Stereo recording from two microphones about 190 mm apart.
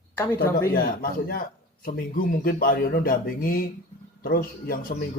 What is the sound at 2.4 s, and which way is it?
Speech, 50° left (ahead or behind).